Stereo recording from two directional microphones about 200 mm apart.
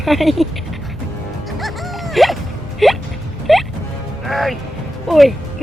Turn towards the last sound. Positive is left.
turn(degrees=0)  # may be behind; listen again after turning